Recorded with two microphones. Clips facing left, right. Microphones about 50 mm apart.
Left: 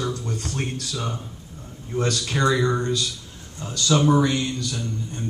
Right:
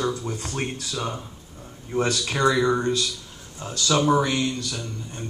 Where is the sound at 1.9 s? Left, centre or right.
Centre.